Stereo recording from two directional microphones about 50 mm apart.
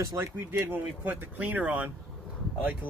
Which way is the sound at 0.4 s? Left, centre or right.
Right.